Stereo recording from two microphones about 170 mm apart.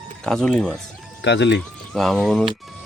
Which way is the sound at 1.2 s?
90° left.